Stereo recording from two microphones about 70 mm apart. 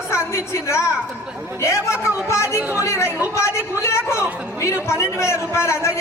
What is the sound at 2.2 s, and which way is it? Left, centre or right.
A man's voice, left.